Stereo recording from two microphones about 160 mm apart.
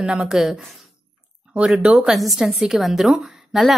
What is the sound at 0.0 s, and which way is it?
A woman's voice, 5° right (ahead or behind).